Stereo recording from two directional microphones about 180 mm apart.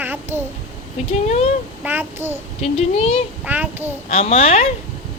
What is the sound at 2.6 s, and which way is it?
Speech, 35° left (ahead or behind).